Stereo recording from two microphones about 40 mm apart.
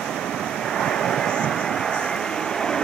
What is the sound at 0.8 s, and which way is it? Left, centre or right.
Waves, centre.